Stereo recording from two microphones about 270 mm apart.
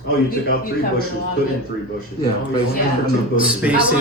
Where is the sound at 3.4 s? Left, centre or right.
Centre.